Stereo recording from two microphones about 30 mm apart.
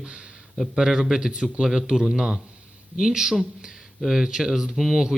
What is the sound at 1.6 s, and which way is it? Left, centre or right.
Speech, centre.